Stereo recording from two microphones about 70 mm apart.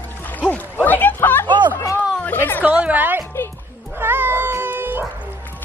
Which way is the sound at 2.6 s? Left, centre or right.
Centre.